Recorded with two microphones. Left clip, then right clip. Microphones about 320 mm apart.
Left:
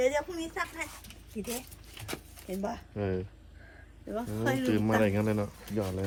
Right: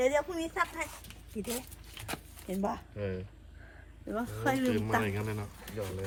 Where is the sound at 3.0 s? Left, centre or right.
Centre.